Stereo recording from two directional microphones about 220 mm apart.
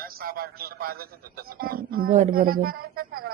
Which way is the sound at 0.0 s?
40° right (ahead or behind).